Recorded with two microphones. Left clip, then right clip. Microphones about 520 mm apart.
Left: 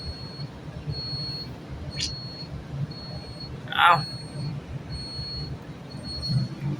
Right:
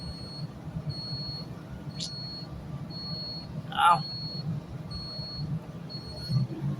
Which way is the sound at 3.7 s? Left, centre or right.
Right.